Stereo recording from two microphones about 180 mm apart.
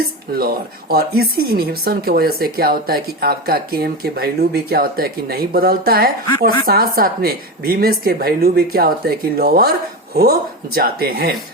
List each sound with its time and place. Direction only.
0.3 s speech: 55° right (ahead or behind)